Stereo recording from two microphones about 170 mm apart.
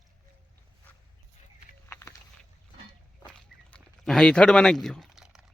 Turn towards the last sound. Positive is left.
turn(degrees=0)  # may be behind; listen again after turning